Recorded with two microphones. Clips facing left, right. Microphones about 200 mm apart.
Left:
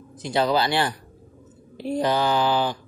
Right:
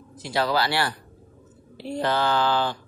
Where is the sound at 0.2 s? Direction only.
20° left (ahead or behind).